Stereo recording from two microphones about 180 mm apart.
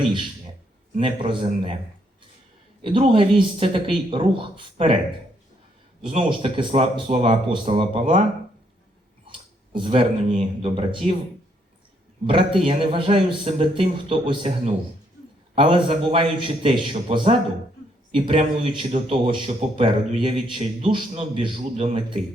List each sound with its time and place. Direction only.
0.9 s a man's voice: 30° right (ahead or behind)
2.8 s a man's voice: 30° right (ahead or behind)
6.1 s a man's voice: 30° right (ahead or behind)
9.7 s a man's voice: 30° right (ahead or behind)
12.2 s a man's voice: 30° right (ahead or behind)